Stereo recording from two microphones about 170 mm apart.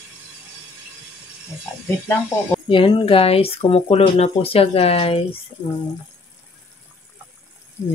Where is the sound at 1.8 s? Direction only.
10° left (ahead or behind).